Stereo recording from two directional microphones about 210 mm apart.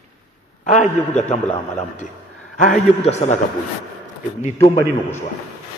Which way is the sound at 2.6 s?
35° left (ahead or behind).